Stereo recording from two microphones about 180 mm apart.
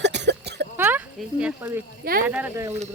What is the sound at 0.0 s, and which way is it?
Throat clearing, 75° right (ahead or behind).